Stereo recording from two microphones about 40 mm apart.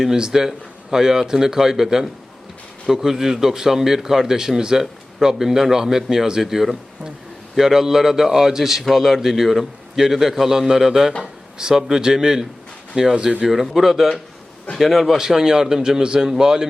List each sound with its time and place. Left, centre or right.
0.0 s speech: centre
12.9 s speech: right
13.5 s a man's voice: centre
15.2 s speech: centre